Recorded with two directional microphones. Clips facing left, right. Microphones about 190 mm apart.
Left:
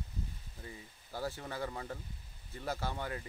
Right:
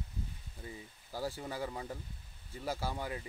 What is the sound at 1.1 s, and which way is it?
Speech, 10° right (ahead or behind).